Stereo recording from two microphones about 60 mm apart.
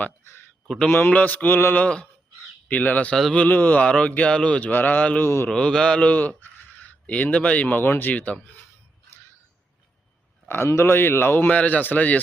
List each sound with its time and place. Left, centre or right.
0.9 s mantra: left
1.8 s mantra: centre
2.6 s speech: left
3.8 s mantra: centre
4.7 s speech: left
5.2 s a man's voice: left
5.5 s mantra: centre
6.1 s speech: left
7.8 s mantra: left
8.1 s speech: left
10.5 s a man's voice: left
11.5 s speech: left